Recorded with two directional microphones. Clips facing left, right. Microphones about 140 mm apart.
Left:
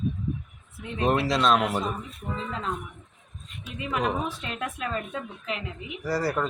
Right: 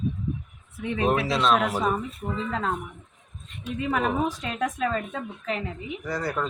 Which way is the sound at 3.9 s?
40° right (ahead or behind).